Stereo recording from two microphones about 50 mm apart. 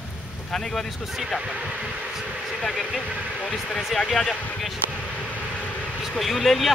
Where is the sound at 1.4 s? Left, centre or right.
Centre.